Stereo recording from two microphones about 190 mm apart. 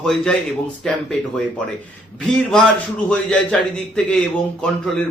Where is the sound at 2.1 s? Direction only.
5° left (ahead or behind).